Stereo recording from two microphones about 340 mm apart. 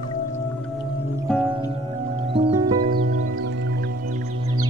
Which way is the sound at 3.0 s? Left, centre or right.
Right.